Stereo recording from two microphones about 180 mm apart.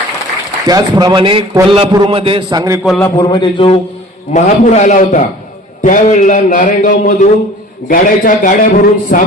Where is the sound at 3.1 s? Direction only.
25° left (ahead or behind).